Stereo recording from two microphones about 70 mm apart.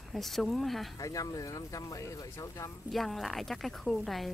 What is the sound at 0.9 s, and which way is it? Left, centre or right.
Speech, left.